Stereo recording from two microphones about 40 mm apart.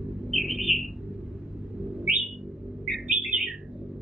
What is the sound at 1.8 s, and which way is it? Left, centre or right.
Bird, centre.